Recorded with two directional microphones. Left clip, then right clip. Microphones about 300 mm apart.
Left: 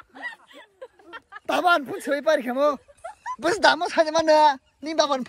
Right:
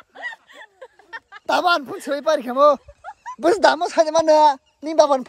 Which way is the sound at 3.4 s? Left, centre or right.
Centre.